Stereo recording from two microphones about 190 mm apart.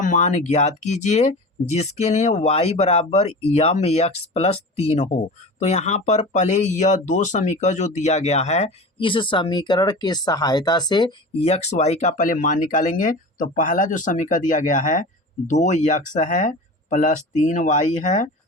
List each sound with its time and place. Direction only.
0.0 s speech: 40° left (ahead or behind)